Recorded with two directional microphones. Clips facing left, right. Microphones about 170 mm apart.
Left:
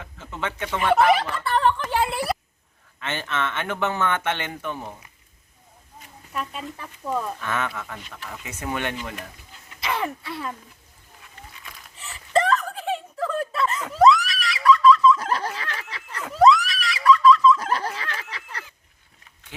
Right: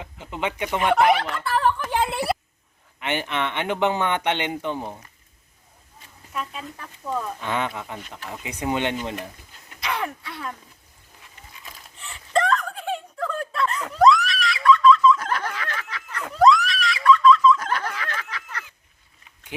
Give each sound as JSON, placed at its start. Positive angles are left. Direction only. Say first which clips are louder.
{"t": 0.0, "sound": "speech", "louder": "right 3 dB", "side_deg": -15}
{"t": 1.5, "sound": "a sound", "louder": "left 1 dB", "side_deg": -5}
{"t": 1.9, "sound": "a sound", "louder": "even", "side_deg": -20}
{"t": 3.0, "sound": "speech", "louder": "right 2 dB", "side_deg": -15}
{"t": 6.3, "sound": "speech", "louder": "left 1 dB", "side_deg": 0}
{"t": 7.3, "sound": "speech", "louder": "right 1 dB", "side_deg": -20}
{"t": 9.8, "sound": "speech", "louder": "left 1 dB", "side_deg": 0}
{"t": 11.9, "sound": "a sound", "louder": "left 1 dB", "side_deg": 5}
{"t": 15.2, "sound": "a sound", "louder": "left 1 dB", "side_deg": 30}
{"t": 16.2, "sound": "screaming", "louder": "even", "side_deg": 0}
{"t": 17.6, "sound": "snicker", "louder": "left 1 dB", "side_deg": 30}
{"t": 18.2, "sound": "goose", "louder": "right 2 dB", "side_deg": 30}